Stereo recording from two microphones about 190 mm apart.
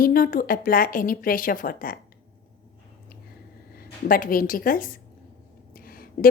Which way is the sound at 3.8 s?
50° left (ahead or behind).